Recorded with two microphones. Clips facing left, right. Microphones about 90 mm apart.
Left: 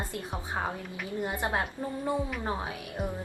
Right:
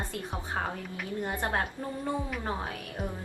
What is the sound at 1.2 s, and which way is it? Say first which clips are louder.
Speech: even; 5° left (ahead or behind).